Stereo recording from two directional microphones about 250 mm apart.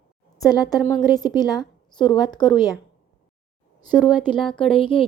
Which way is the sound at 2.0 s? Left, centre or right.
Centre.